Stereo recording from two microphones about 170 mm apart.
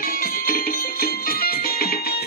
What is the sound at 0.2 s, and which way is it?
Music, 60° left (ahead or behind).